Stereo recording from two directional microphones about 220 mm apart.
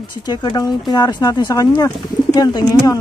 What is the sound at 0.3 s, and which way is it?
Speech, 20° left (ahead or behind).